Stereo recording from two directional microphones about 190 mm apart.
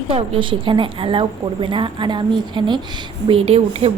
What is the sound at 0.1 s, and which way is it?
A woman's voice, 30° right (ahead or behind).